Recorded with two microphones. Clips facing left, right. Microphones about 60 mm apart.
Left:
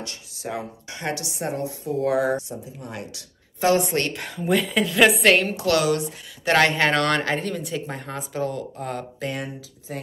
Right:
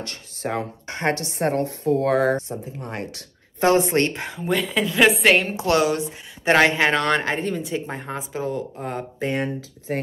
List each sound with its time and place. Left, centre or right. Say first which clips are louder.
0.0 s speech: right 4 dB; right
4.4 s a woman's voice: left 1 dB; centre
5.5 s a woman's voice: right 1 dB; right
6.7 s speech: right 1 dB; centre
9.9 s speech: right 7 dB; right